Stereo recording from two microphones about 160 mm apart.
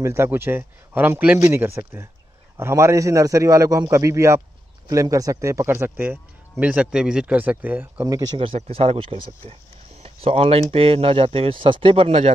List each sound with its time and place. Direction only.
0.0 s a man's voice: 15° right (ahead or behind)
8.4 s speech: 35° right (ahead or behind)